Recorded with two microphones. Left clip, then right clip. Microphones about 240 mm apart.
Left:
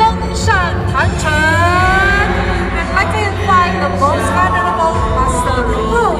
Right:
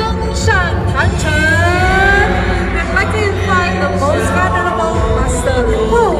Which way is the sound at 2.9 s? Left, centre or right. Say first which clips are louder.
Even; left.